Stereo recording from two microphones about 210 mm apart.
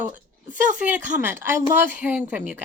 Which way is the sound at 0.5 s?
5° right (ahead or behind).